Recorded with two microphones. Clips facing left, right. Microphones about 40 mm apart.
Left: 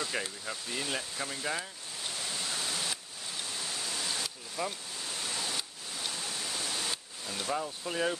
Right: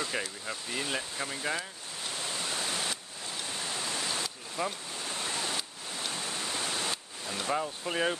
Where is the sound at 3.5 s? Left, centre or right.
Right.